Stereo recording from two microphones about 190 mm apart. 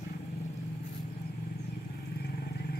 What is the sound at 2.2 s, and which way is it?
Vehicle, 55° left (ahead or behind).